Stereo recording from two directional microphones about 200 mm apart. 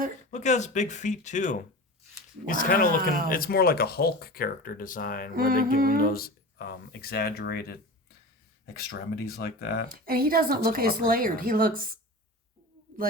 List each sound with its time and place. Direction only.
0.3 s speech: 35° left (ahead or behind)
5.4 s a woman's voice: 45° right (ahead or behind)
6.0 s speech: 50° left (ahead or behind)
9.9 s a woman's voice: 45° right (ahead or behind)